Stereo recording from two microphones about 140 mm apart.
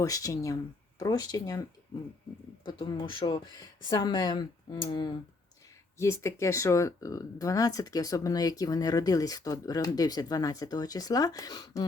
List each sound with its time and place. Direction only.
0.0 s speech: 25° left (ahead or behind)
2.6 s speech: 35° left (ahead or behind)
6.0 s speech: 20° left (ahead or behind)